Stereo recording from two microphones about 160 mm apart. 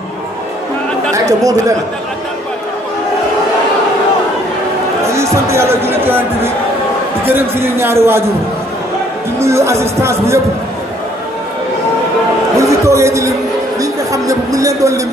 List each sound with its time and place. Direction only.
1.1 s speech: 20° right (ahead or behind)
5.0 s speech: 20° right (ahead or behind)
9.4 s speech: 15° right (ahead or behind)
12.5 s music: 20° right (ahead or behind)
13.7 s a sound: 20° right (ahead or behind)